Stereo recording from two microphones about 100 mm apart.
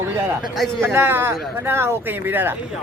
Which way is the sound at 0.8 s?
25° right (ahead or behind).